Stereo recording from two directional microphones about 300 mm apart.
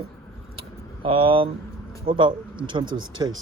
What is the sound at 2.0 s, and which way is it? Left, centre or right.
Speech, centre.